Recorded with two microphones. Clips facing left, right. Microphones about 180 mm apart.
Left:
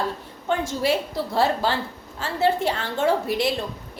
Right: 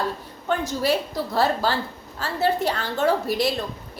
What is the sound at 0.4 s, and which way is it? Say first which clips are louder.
A woman's voice: even; 25° left (ahead or behind).